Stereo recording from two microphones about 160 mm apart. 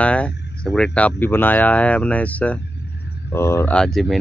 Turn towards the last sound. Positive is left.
turn(degrees=0)  # may be behind; listen again after turning